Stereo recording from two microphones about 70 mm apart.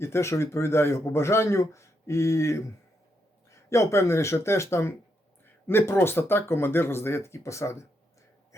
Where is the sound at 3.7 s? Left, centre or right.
Left.